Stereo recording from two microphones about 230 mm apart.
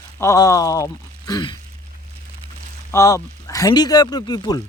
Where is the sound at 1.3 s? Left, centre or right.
Centre.